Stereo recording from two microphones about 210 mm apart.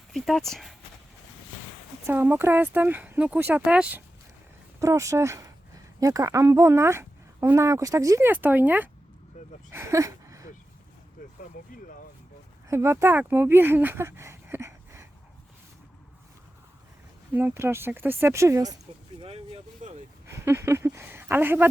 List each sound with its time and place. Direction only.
0.1 s speech: centre (ahead or behind)
2.0 s speech: 10° right (ahead or behind)
9.7 s a sound: 15° right (ahead or behind)
12.6 s speech: 10° right (ahead or behind)
17.3 s speech: 10° right (ahead or behind)
19.2 s vehicle: 30° right (ahead or behind)
20.3 s a sound: 15° right (ahead or behind)